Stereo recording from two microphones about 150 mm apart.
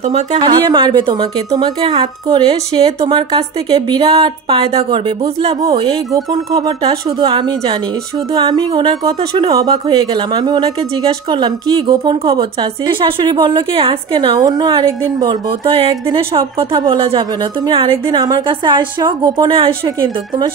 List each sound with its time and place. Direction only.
0.0 s speech: 50° right (ahead or behind)
0.7 s a woman's voice: 30° right (ahead or behind)